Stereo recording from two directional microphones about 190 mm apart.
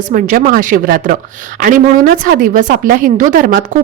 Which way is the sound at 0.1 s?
45° right (ahead or behind).